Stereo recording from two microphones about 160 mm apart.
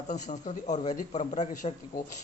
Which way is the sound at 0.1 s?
50° left (ahead or behind).